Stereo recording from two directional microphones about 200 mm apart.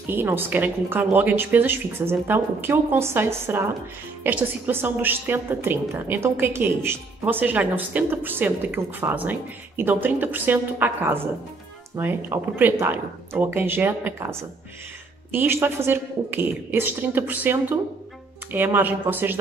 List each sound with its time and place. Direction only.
0.0 s a woman's voice: 10° right (ahead or behind)